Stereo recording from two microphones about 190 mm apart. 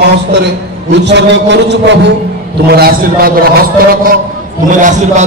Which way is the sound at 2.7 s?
55° right (ahead or behind).